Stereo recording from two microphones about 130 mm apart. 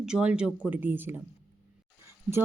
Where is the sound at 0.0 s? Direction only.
5° right (ahead or behind).